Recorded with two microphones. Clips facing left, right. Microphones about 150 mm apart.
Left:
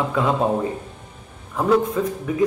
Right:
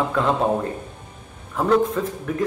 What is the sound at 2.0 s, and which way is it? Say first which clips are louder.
Speech: left 2 dB; 5° left (ahead or behind).